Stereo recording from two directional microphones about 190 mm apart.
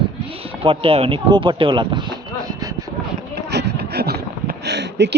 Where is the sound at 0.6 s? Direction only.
30° right (ahead or behind).